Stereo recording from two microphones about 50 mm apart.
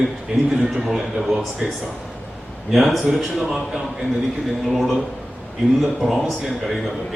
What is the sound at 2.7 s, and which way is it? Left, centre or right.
A man's voice, centre.